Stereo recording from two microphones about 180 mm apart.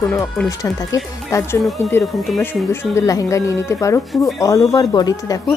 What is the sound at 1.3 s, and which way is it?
Speech, 15° left (ahead or behind).